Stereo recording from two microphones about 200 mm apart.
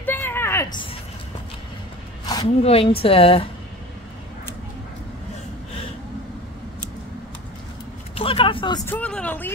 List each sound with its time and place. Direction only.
0.0 s a sound: 10° left (ahead or behind)
2.4 s a woman's voice: 30° left (ahead or behind)
8.1 s vehicle: 30° left (ahead or behind)
8.8 s speech: 10° left (ahead or behind)